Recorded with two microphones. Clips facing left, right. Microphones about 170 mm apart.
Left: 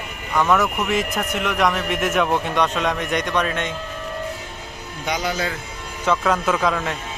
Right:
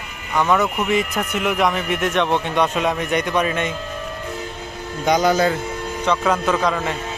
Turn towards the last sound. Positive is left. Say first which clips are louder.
# right 1 dB
turn(degrees=0)  # may be behind; listen again after turning